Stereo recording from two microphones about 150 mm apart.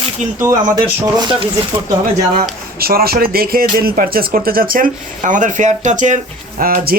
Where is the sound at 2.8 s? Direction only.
85° right; by 6.1 s 55° right (ahead or behind).